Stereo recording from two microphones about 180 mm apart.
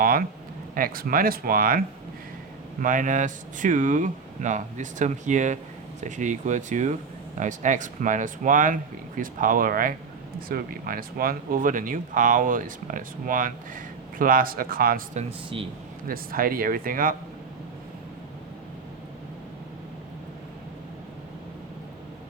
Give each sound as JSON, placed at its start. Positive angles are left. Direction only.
{"t": 0.0, "sound": "speech", "side_deg": -50}
{"t": 2.8, "sound": "speech", "side_deg": -45}
{"t": 15.2, "sound": "speech", "side_deg": -30}
{"t": 16.0, "sound": "speech", "side_deg": -55}